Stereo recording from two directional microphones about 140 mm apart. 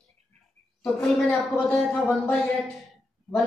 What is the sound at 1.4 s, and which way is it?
Speech, 10° left (ahead or behind).